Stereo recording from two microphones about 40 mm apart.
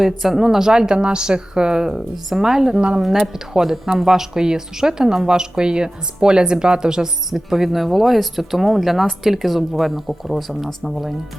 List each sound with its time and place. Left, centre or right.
0.0 s speech: centre